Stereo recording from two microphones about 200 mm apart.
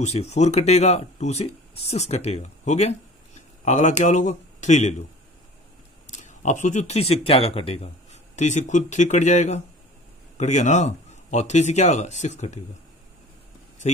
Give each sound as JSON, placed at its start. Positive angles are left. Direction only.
{"t": 0.0, "sound": "speech", "side_deg": 35}
{"t": 6.0, "sound": "speech", "side_deg": 35}